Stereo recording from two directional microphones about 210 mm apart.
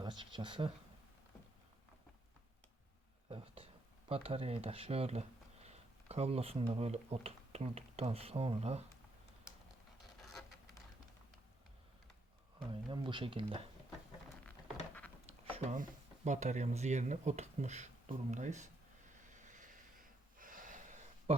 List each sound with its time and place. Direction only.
0.0 s a sound: 20° right (ahead or behind)
3.2 s a sound: 25° right (ahead or behind)
4.1 s speech: 25° right (ahead or behind)
12.5 s speech: 25° right (ahead or behind)
15.5 s speech: 35° right (ahead or behind)
19.3 s snort: 35° right (ahead or behind)